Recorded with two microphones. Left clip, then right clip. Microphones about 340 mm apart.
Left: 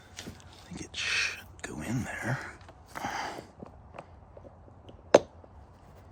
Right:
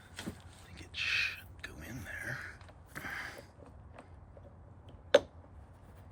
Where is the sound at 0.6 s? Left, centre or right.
Centre.